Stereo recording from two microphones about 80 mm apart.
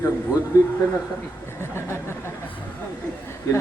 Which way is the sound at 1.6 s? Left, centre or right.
Left.